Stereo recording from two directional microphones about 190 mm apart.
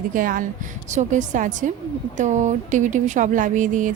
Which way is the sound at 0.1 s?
45° right (ahead or behind).